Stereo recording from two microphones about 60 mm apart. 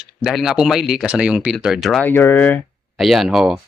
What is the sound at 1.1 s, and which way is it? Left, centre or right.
Speech, centre.